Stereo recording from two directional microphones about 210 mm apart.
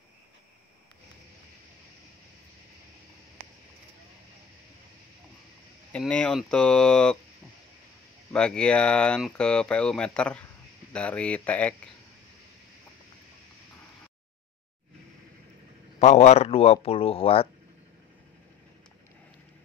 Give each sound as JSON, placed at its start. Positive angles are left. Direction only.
{"t": 5.9, "sound": "speech", "side_deg": 5}
{"t": 8.3, "sound": "speech", "side_deg": 5}
{"t": 16.0, "sound": "speech", "side_deg": 30}